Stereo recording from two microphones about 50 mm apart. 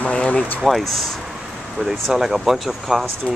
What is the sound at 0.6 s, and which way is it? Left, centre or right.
Speech, centre.